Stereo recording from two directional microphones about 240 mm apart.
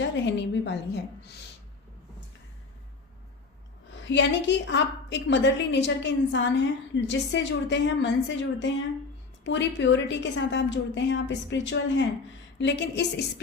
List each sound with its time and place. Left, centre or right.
0.0 s a woman's voice: left
4.1 s a woman's voice: left